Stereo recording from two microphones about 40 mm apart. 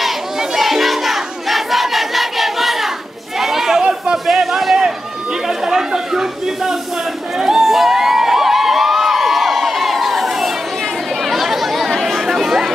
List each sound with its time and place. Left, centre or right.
0.4 s crowd: centre
3.3 s chatter: centre
4.3 s a sound: centre
5.7 s chatter: centre
7.3 s crowd: centre
11.2 s chatter: centre